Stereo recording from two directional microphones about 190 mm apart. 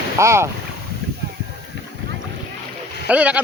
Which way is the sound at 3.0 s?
5° right (ahead or behind).